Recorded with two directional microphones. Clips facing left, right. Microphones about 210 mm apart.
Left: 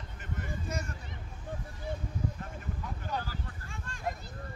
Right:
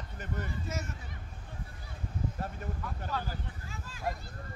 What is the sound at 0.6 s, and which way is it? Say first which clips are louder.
Speech: left 1 dB; 5° right (ahead or behind).